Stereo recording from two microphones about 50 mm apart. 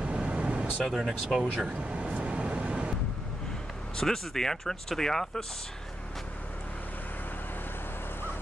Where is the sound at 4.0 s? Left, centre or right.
Centre.